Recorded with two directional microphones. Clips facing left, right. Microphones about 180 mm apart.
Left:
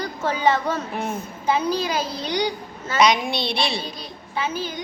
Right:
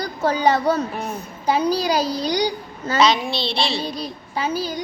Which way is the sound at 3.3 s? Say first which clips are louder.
Right 1 dB; 25° right (ahead or behind).